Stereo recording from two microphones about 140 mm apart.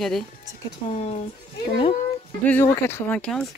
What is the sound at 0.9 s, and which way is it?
Speech, 50° left (ahead or behind).